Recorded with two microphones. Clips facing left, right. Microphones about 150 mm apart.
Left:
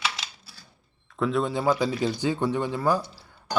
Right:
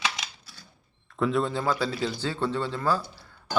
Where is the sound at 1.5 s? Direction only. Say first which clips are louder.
Left 3 dB; 15° left (ahead or behind).